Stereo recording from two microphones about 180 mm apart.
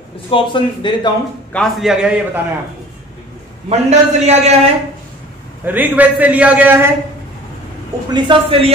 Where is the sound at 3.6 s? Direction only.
40° right (ahead or behind).